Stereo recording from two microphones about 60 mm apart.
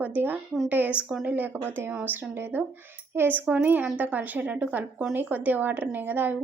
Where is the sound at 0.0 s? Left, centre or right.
Right.